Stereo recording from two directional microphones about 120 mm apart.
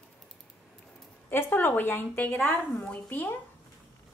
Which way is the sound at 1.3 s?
15° left (ahead or behind).